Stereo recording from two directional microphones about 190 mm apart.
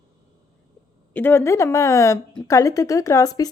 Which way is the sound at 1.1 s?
10° left (ahead or behind).